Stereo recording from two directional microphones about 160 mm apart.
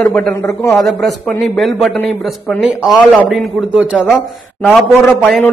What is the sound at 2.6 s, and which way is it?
A man's voice, 5° right (ahead or behind).